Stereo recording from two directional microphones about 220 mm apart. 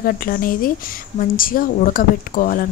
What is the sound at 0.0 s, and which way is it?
Speech, 40° left (ahead or behind).